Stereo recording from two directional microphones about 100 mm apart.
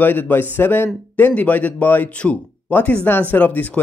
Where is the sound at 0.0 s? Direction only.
20° left (ahead or behind).